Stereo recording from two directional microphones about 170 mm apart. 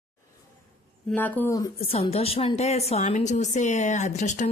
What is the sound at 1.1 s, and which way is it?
Speech, 10° left (ahead or behind).